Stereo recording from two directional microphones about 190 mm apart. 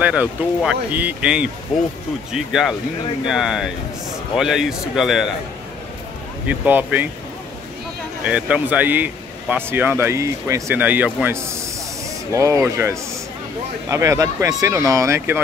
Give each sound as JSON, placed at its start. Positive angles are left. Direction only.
{"t": 0.0, "sound": "speech", "side_deg": -5}
{"t": 6.4, "sound": "speech", "side_deg": -10}
{"t": 8.2, "sound": "speech", "side_deg": -5}